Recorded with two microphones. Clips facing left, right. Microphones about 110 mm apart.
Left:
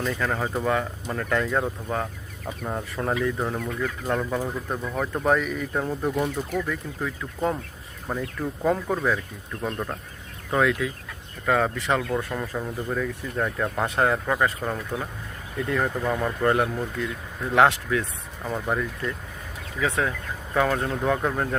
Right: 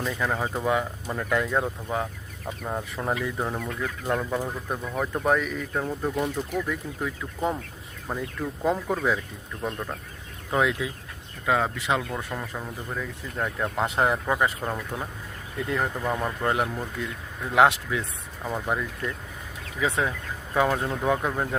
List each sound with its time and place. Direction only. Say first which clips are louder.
0.0 s speech: left 1 dB; 10° right (ahead or behind)
9.7 s speech: left 3 dB; 10° left (ahead or behind)
10.5 s speech: left 2 dB; 20° right (ahead or behind)
14.6 s speech: left 2 dB; centre (ahead or behind)
18.4 s speech: left 1 dB; 5° right (ahead or behind)
19.8 s speech: left 1 dB; 20° right (ahead or behind)
20.5 s speech: even; 10° right (ahead or behind)